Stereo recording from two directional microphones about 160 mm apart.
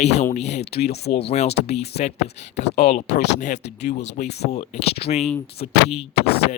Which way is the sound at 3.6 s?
90° left.